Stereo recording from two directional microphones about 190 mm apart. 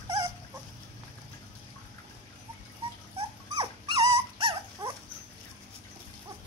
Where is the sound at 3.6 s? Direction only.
25° right (ahead or behind).